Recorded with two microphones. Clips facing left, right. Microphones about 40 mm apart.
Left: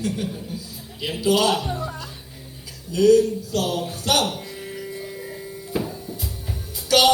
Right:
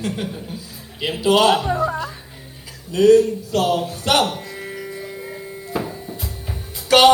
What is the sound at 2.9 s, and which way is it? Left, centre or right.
Speech, right.